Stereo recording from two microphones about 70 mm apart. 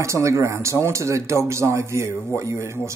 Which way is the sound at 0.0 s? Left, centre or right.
Right.